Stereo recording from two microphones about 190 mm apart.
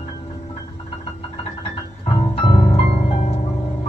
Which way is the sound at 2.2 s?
25° left (ahead or behind).